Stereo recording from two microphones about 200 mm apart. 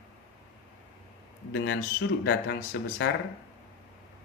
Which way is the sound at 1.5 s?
60° left (ahead or behind).